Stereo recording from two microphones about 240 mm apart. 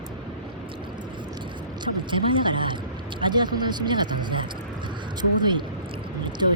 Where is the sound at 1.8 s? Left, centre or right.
Centre.